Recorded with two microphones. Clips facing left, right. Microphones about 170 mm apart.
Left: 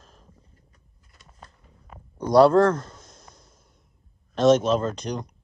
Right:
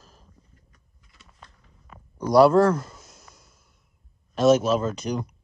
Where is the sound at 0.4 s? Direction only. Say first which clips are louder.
Even; 30° left (ahead or behind).